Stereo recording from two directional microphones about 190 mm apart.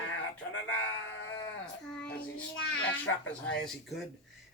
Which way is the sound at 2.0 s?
5° left (ahead or behind).